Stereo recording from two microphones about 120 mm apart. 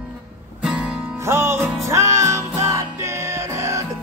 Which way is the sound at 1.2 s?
20° right (ahead or behind).